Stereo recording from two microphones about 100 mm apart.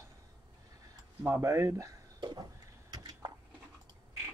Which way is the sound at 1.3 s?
30° right (ahead or behind).